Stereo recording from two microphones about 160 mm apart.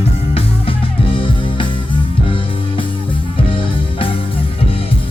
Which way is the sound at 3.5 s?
35° left (ahead or behind).